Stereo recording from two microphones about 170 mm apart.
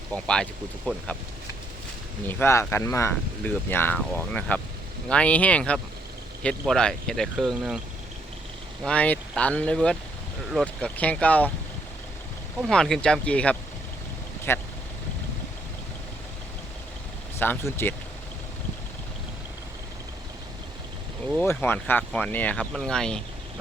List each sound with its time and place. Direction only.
0.1 s speech: 5° left (ahead or behind)
2.2 s speech: 15° left (ahead or behind); by 7.8 s centre (ahead or behind)
8.8 s speech: 5° left (ahead or behind)
12.5 s speech: centre (ahead or behind)
17.3 s speech: 15° left (ahead or behind)
21.3 s speech: 10° left (ahead or behind)